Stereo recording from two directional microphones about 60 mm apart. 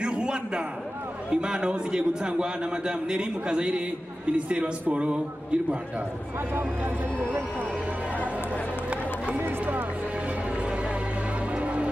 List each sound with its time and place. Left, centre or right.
0.0 s a sound: centre
1.3 s a man's voice: centre
9.4 s run: right
11.5 s music: centre